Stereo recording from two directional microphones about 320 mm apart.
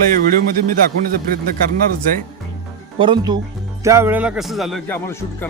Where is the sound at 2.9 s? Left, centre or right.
Centre.